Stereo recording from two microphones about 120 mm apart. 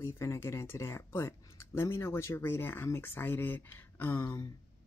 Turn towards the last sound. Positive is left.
turn(degrees=20)  # may be behind; listen again after turning